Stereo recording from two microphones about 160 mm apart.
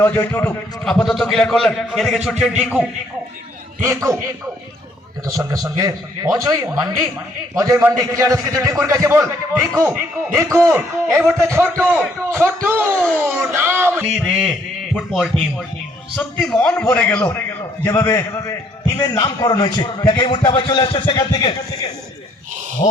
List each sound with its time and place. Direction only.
0.0 s a man's voice: 15° left (ahead or behind)
0.9 s a man's voice: centre (ahead or behind)
3.8 s speech: 15° right (ahead or behind)
5.2 s a man's voice: 20° right (ahead or behind)
11.1 s a man's voice: 5° left (ahead or behind)
11.4 s a man's voice: 15° right (ahead or behind); by 17.3 s 10° left (ahead or behind)
17.8 s a man's voice: 20° left (ahead or behind)
22.8 s speech: 30° left (ahead or behind)